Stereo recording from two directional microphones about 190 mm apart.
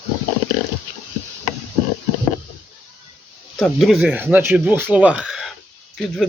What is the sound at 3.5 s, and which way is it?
Speech, centre (ahead or behind).